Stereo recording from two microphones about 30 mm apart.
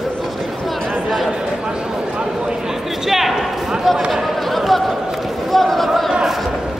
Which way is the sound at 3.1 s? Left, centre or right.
Centre.